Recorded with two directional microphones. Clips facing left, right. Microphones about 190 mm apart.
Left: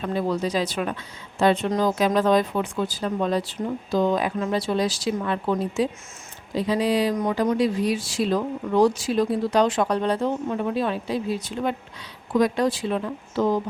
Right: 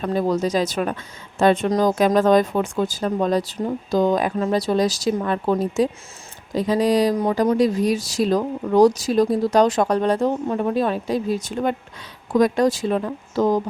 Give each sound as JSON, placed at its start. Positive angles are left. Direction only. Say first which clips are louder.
{"t": 0.0, "sound": "speech", "louder": "right 4 dB", "side_deg": -40}